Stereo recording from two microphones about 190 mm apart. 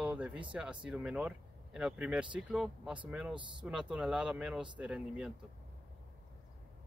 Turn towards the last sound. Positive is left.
turn(degrees=-5)  # may be behind; listen again after turning